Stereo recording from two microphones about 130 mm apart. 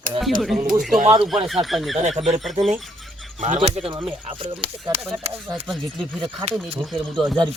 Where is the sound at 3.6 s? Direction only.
45° right (ahead or behind).